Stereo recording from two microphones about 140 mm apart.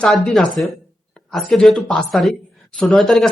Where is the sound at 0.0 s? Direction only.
Centre (ahead or behind).